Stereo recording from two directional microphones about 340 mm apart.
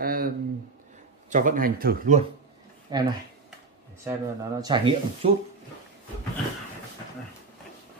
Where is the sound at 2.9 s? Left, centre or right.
Centre.